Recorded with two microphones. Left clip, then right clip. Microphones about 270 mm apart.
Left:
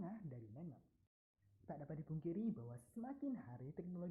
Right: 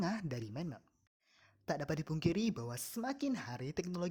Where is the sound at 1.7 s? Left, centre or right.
Right.